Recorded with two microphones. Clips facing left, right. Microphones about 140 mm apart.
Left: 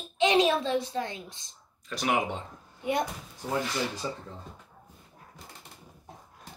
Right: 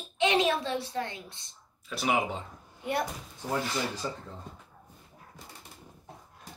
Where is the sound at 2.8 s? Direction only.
15° left (ahead or behind).